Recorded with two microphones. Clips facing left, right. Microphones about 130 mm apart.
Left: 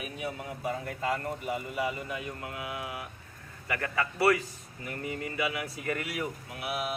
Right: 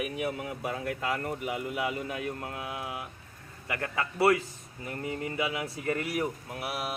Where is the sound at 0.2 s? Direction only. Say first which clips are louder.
Right 3 dB; 65° right (ahead or behind).